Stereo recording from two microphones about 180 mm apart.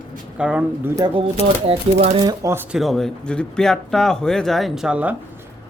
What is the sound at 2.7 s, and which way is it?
Speech, centre (ahead or behind).